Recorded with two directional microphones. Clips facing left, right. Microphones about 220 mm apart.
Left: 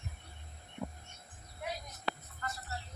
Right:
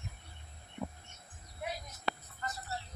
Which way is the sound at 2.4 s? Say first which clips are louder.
Even; 25° right (ahead or behind).